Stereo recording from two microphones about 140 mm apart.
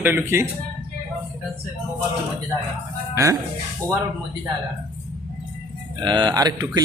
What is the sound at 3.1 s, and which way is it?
Speech, 20° right (ahead or behind).